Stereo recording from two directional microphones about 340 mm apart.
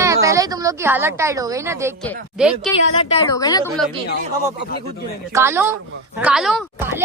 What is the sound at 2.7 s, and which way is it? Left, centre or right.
Speech, centre.